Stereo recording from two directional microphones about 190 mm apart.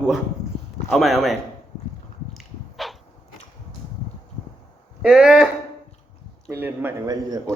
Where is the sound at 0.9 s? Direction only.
Centre (ahead or behind).